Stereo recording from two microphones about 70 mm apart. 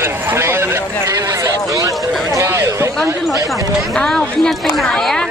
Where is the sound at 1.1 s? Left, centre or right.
Right.